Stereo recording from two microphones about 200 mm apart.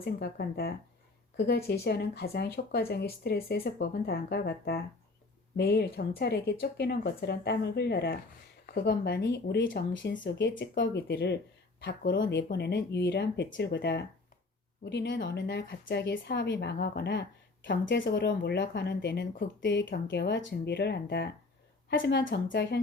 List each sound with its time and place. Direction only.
0.0 s speech: 50° left (ahead or behind); by 12.4 s 65° left (ahead or behind)
12.4 s speech: 50° left (ahead or behind)